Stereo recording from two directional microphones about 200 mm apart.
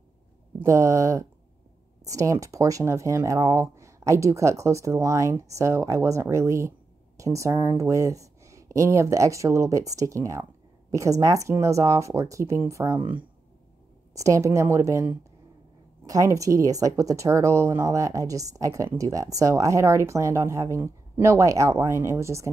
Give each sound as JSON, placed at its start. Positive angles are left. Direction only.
{"t": 0.6, "sound": "speech", "side_deg": -15}
{"t": 14.1, "sound": "speech", "side_deg": -15}